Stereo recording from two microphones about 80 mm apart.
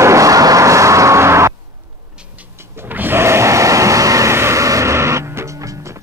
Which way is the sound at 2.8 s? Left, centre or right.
Right.